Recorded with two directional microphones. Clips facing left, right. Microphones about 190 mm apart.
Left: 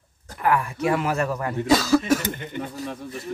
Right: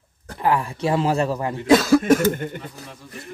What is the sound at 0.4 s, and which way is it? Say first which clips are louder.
Speech: right 1 dB; 25° right (ahead or behind).